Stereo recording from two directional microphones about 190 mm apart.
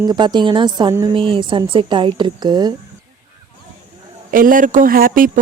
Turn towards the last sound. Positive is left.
turn(degrees=-45)  # may be behind; listen again after turning